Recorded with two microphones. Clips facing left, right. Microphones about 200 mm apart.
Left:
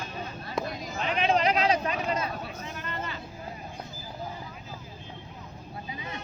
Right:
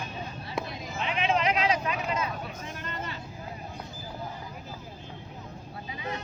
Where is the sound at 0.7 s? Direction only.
45° left (ahead or behind).